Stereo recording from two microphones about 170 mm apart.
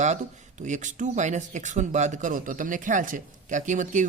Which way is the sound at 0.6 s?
45° right (ahead or behind).